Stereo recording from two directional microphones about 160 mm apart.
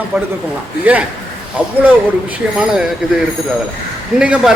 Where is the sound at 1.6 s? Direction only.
10° right (ahead or behind).